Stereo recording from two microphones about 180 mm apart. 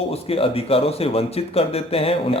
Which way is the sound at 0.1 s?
30° left (ahead or behind).